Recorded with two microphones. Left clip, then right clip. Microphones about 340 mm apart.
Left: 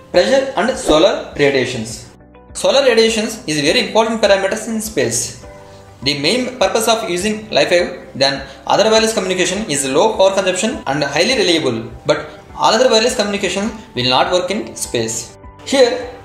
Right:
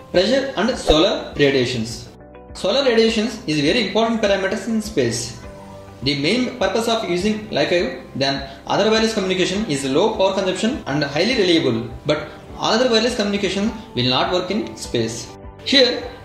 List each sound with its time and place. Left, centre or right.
0.1 s speech: left